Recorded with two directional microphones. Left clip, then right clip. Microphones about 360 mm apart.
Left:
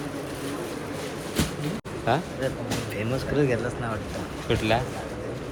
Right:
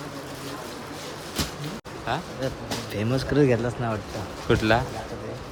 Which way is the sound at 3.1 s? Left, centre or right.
Right.